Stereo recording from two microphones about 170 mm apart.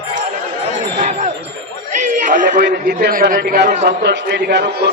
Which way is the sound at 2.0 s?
50° right (ahead or behind).